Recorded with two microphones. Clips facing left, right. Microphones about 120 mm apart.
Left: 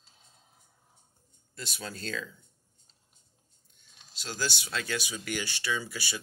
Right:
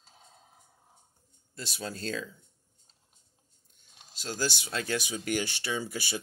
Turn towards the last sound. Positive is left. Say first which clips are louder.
# right 1 dB
turn(degrees=-45)  # may be behind; listen again after turning